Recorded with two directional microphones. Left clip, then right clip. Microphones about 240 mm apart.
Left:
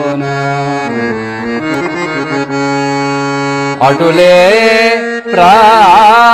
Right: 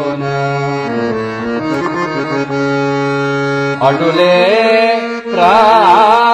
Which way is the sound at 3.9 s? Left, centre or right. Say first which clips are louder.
Left 5 dB; left.